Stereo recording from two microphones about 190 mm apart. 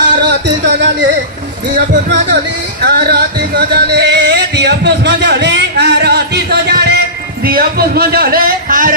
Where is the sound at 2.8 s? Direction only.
60° right (ahead or behind).